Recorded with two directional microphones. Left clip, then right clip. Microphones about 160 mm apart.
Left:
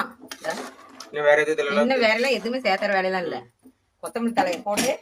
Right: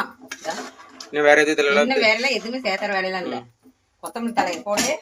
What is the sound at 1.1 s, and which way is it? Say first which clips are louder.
Speech: right 3 dB; 40° right (ahead or behind).